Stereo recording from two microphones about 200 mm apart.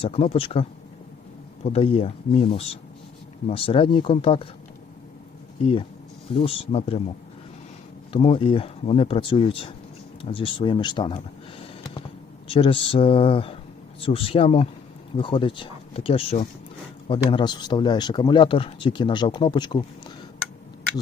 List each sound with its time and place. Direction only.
0.0 s speech: 30° left (ahead or behind)
6.3 s speech: 25° left (ahead or behind)
8.1 s speech: 25° left (ahead or behind)
11.6 s a sound: 25° left (ahead or behind)
12.5 s speech: 25° left (ahead or behind)